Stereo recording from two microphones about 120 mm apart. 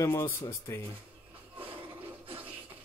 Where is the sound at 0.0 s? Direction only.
25° left (ahead or behind).